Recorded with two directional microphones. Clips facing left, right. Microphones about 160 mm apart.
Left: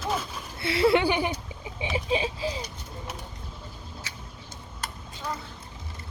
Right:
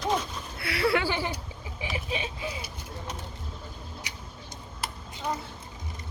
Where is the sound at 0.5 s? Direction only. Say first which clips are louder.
Left 5 dB; 25° left (ahead or behind).